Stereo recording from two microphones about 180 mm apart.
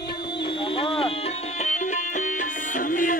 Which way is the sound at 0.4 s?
30° left (ahead or behind).